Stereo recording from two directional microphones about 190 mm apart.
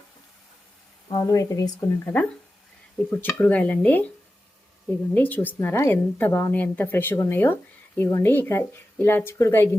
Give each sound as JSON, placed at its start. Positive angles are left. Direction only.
{"t": 1.1, "sound": "a woman's voice", "side_deg": 15}
{"t": 5.1, "sound": "a woman's voice", "side_deg": 10}